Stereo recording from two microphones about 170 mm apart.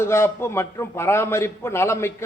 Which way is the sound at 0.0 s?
15° left (ahead or behind).